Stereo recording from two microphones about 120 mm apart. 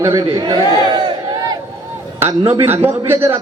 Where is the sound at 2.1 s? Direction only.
20° right (ahead or behind).